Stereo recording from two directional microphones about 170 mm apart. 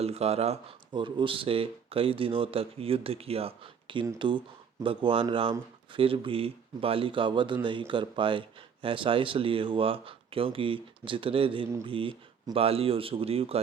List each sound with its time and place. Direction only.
0.0 s speech: 40° right (ahead or behind)